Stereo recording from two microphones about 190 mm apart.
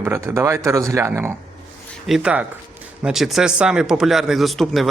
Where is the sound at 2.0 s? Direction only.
5° right (ahead or behind).